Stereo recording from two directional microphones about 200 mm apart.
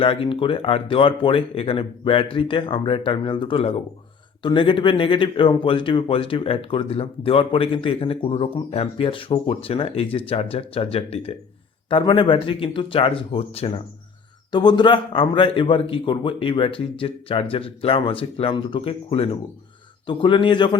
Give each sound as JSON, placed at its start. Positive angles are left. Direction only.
{"t": 0.0, "sound": "speech", "side_deg": 25}